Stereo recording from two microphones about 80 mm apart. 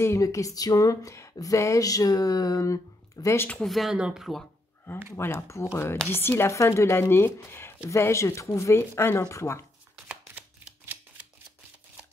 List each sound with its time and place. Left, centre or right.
0.0 s a sound: left
3.5 s speech: centre
5.1 s speech: left